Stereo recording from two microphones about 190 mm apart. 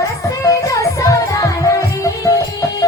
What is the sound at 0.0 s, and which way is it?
Music, 15° left (ahead or behind).